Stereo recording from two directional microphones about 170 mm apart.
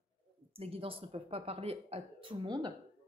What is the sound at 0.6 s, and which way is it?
Speech, 35° right (ahead or behind).